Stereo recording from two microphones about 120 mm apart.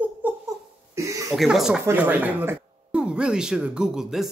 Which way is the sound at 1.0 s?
25° right (ahead or behind).